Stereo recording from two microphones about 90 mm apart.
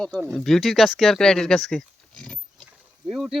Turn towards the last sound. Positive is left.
turn(degrees=-5)  # may be behind; listen again after turning